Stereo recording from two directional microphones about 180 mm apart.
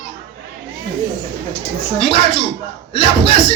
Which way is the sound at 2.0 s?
30° left (ahead or behind).